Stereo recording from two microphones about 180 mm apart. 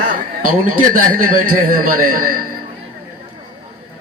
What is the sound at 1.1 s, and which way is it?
A man's voice, 50° right (ahead or behind).